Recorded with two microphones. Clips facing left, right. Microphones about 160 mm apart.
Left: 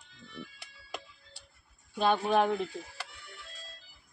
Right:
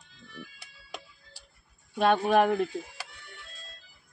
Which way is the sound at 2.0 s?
65° right (ahead or behind).